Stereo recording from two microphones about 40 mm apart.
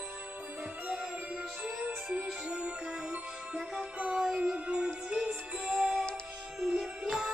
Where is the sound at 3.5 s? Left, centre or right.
Centre.